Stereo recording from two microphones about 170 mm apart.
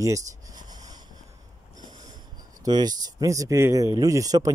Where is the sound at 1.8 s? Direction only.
25° right (ahead or behind).